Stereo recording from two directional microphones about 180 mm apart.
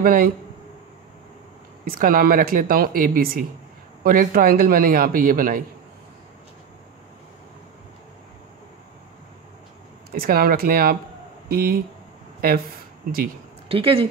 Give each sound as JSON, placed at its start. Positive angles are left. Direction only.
{"t": 0.0, "sound": "a man's voice", "side_deg": -50}
{"t": 1.9, "sound": "a man's voice", "side_deg": -55}
{"t": 10.1, "sound": "speech", "side_deg": -55}
{"t": 13.7, "sound": "speech", "side_deg": -30}